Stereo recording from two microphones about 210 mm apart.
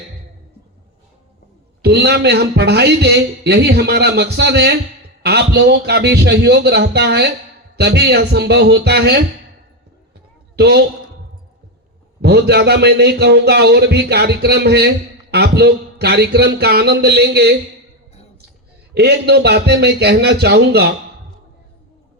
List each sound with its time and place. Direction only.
1.8 s a man's voice: 50° right (ahead or behind)
10.6 s a man's voice: 50° right (ahead or behind)
12.2 s a man's voice: 50° right (ahead or behind)
18.9 s a man's voice: 50° right (ahead or behind)